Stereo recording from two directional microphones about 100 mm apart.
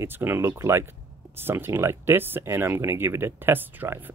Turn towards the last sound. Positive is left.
turn(degrees=-20)  # may be behind; listen again after turning